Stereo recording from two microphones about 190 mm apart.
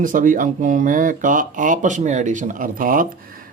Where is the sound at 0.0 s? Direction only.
45° right (ahead or behind).